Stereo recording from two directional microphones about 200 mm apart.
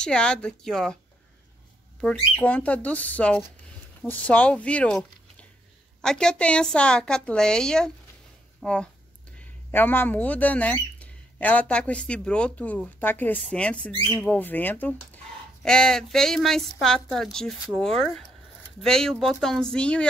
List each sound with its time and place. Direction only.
0.0 s a woman's voice: 5° left (ahead or behind)
2.3 s a woman's voice: 5° left (ahead or behind)